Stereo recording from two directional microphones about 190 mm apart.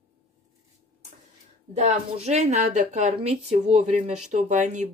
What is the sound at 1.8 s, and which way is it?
Speech, 35° right (ahead or behind).